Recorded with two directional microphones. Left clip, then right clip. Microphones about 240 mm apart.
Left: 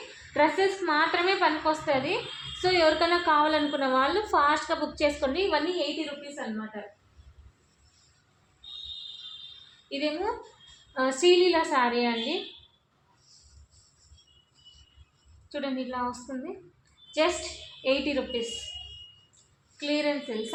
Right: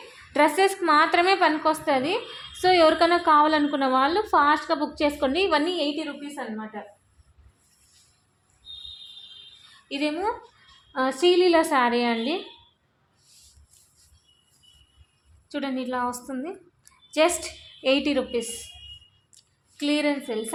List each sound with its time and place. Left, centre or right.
0.3 s a woman's voice: right
9.9 s a woman's voice: right
10.9 s a woman's voice: right
15.4 s a woman's voice: right
19.7 s a woman's voice: right